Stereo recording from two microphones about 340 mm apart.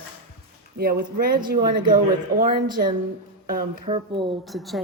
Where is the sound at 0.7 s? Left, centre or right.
Right.